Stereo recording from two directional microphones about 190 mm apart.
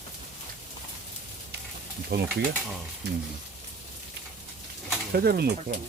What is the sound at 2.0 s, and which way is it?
Speech, 60° right (ahead or behind).